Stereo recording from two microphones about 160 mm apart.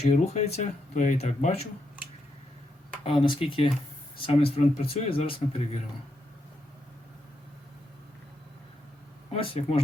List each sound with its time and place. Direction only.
0.0 s speech: 45° left (ahead or behind)
3.0 s speech: 35° left (ahead or behind)
9.3 s speech: 40° left (ahead or behind)